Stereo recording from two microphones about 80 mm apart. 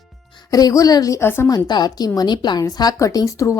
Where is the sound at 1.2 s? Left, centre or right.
Left.